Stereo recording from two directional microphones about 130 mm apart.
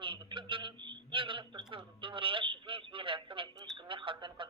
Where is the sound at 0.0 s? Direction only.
40° right (ahead or behind).